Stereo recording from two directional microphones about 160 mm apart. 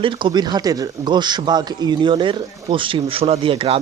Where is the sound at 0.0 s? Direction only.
30° right (ahead or behind).